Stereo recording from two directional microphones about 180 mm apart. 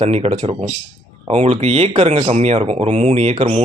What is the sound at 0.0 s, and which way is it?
Speech, 35° right (ahead or behind).